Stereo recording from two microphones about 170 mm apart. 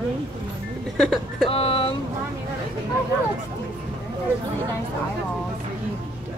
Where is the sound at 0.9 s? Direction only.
Centre (ahead or behind).